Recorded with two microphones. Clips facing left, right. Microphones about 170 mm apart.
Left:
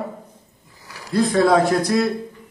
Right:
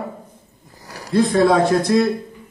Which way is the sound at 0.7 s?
40° right (ahead or behind).